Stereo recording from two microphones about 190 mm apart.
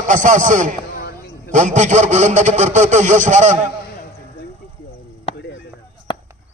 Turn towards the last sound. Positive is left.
turn(degrees=25)  # may be behind; listen again after turning